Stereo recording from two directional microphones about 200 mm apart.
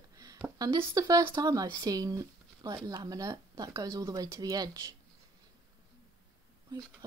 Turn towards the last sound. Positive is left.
turn(degrees=-20)  # may be behind; listen again after turning